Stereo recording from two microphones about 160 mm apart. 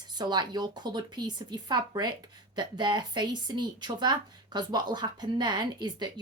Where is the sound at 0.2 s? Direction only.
25° right (ahead or behind).